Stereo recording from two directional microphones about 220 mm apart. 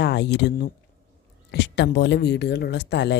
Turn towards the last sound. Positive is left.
turn(degrees=50)  # may be behind; listen again after turning